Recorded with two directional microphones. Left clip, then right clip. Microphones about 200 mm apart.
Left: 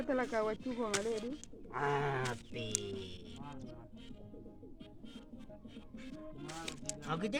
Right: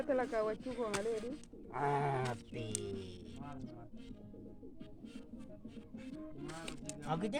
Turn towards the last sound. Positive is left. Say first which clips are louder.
# even
turn(degrees=-15)  # may be behind; listen again after turning